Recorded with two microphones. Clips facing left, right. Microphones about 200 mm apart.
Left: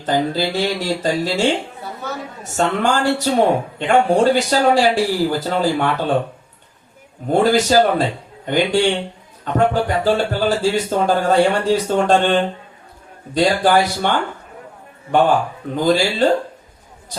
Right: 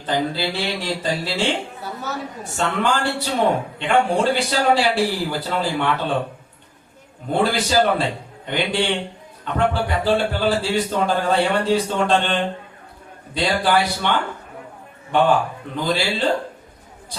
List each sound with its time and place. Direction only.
0.0 s speech: 45° left (ahead or behind)
7.3 s speech: 45° left (ahead or behind)